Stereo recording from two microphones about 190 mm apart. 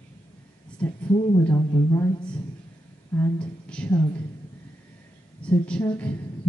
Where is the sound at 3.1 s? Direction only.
10° left (ahead or behind).